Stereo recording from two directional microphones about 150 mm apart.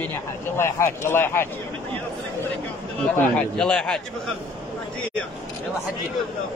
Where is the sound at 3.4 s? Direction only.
5° left (ahead or behind).